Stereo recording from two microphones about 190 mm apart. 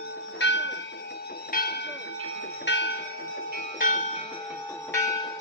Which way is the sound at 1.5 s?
55° left (ahead or behind).